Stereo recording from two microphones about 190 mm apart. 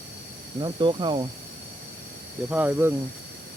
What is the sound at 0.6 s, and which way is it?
Speech, 25° right (ahead or behind).